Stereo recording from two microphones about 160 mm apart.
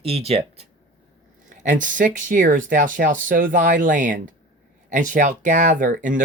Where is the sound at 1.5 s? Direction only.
50° right (ahead or behind).